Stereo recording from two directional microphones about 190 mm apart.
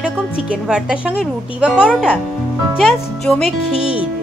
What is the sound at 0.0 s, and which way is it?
A woman's voice, 5° right (ahead or behind).